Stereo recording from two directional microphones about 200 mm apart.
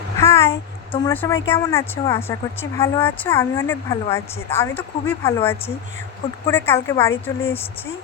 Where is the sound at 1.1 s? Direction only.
10° left (ahead or behind).